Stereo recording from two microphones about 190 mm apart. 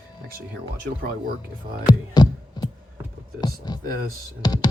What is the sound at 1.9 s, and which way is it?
Music, 20° left (ahead or behind).